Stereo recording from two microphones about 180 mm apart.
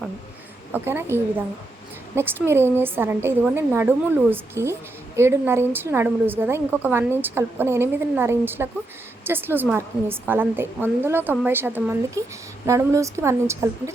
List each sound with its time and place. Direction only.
0.7 s a woman's voice: 10° right (ahead or behind)